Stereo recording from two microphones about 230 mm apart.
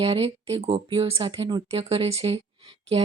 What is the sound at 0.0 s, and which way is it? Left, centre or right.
Speech, right.